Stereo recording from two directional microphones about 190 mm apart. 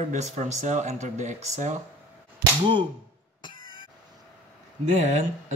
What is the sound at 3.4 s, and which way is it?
Cough, 25° left (ahead or behind).